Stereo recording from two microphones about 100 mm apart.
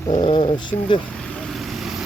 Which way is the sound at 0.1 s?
65° left (ahead or behind).